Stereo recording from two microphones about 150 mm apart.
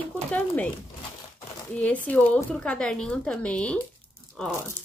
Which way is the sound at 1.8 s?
10° left (ahead or behind).